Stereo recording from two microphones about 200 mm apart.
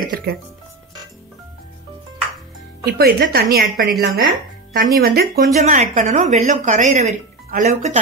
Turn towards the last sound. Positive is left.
turn(degrees=-35)  # may be behind; listen again after turning